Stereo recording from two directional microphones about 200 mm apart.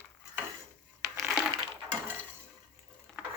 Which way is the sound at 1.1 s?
5° right (ahead or behind).